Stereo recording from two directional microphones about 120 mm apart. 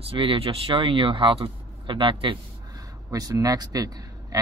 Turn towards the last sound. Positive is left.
turn(degrees=-30)  # may be behind; listen again after turning